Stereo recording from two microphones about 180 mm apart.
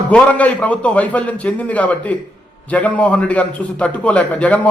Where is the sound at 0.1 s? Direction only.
10° left (ahead or behind).